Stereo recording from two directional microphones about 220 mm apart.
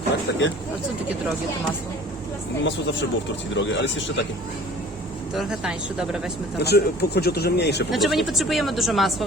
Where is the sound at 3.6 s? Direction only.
55° left (ahead or behind).